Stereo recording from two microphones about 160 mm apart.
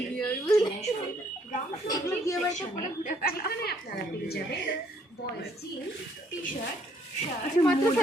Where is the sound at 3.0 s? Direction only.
75° left (ahead or behind).